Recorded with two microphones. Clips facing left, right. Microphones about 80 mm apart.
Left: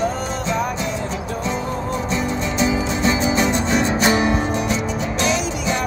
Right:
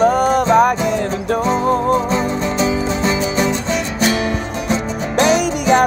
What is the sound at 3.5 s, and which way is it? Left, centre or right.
Music, left.